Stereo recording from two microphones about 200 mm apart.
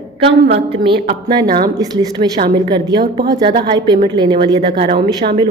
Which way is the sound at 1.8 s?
20° right (ahead or behind).